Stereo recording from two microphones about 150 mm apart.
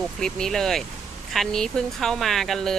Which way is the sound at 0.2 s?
5° left (ahead or behind).